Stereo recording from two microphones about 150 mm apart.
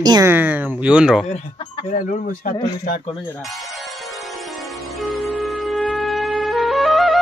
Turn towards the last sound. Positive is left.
turn(degrees=0)  # may be behind; listen again after turning